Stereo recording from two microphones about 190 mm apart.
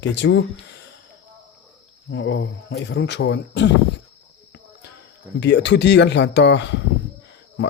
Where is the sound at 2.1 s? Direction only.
70° left (ahead or behind).